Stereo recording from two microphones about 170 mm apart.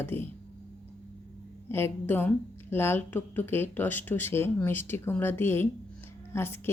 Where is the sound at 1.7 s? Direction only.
15° left (ahead or behind).